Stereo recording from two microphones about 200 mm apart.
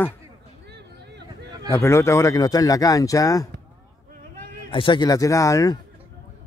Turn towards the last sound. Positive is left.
turn(degrees=15)  # may be behind; listen again after turning